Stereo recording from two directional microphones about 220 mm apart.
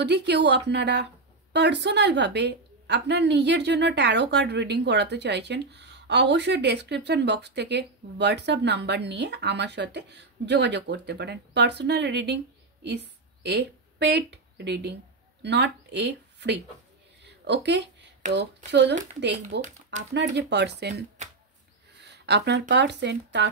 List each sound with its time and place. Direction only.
0.0 s a woman's voice: 50° right (ahead or behind)
17.2 s a sound: 50° right (ahead or behind)
18.7 s a woman's voice: 50° right (ahead or behind)
19.6 s speech: 35° right (ahead or behind)
20.3 s a woman's voice: 50° right (ahead or behind)
21.2 s a sound: 30° right (ahead or behind)
22.0 s speech: 50° right (ahead or behind)